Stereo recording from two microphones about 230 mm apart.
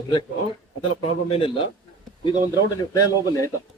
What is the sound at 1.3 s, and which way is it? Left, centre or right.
Speech, left.